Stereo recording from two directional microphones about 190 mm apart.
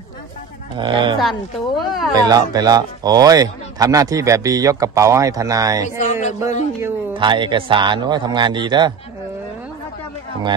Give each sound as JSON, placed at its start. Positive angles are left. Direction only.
{"t": 0.7, "sound": "speech", "side_deg": -25}
{"t": 1.9, "sound": "speech", "side_deg": 0}
{"t": 2.1, "sound": "speech", "side_deg": -20}
{"t": 5.8, "sound": "speech", "side_deg": 40}
{"t": 7.2, "sound": "speech", "side_deg": -25}